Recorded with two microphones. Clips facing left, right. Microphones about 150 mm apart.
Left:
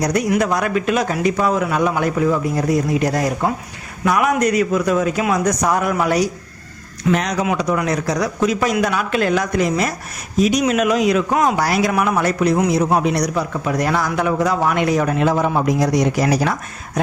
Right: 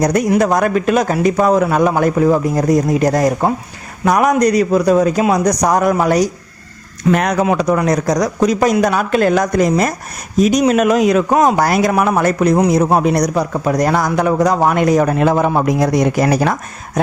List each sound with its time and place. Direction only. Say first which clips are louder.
0.0 s a man's voice: right 4 dB; 45° right (ahead or behind)
7.1 s a man's voice: right 4 dB; 55° right (ahead or behind)